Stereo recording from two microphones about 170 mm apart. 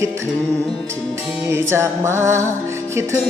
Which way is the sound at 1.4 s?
15° right (ahead or behind).